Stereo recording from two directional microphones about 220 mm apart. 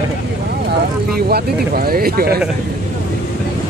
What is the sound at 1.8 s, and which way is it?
Speech, 40° right (ahead or behind).